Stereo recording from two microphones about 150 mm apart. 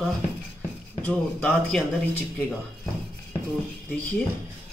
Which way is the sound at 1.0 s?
5° left (ahead or behind).